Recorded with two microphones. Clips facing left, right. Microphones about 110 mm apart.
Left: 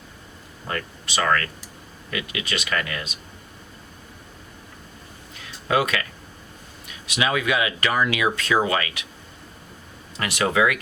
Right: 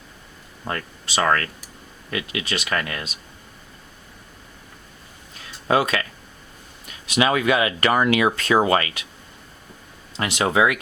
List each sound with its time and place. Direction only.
0.7 s speech: 35° right (ahead or behind)
5.6 s speech: 35° right (ahead or behind)
7.1 s speech: 40° right (ahead or behind)
10.2 s speech: 25° right (ahead or behind)